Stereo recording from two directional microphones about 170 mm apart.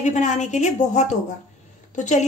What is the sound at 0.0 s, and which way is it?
A woman's voice, 45° left (ahead or behind).